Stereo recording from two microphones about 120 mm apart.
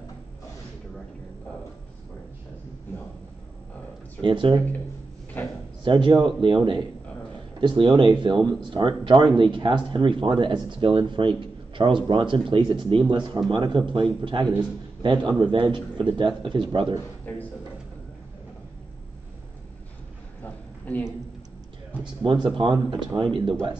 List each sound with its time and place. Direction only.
4.2 s speech: 45° right (ahead or behind)
5.4 s speech: 15° left (ahead or behind)
5.9 s speech: 45° right (ahead or behind)
20.8 s speech: 15° left (ahead or behind)
22.2 s speech: 45° right (ahead or behind)